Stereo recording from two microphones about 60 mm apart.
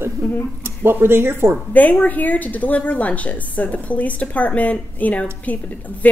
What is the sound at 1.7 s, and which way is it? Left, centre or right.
A woman's voice, left.